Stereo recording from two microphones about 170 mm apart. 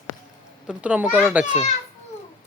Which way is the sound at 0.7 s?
10° right (ahead or behind).